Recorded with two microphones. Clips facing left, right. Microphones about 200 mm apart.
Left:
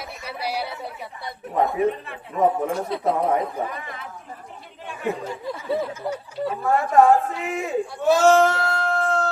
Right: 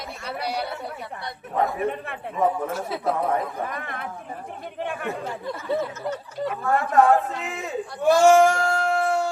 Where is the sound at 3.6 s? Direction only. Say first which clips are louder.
Right 1 dB; 55° right (ahead or behind).